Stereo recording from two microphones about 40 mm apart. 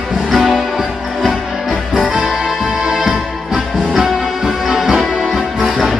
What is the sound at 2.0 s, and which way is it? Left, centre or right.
Music, right.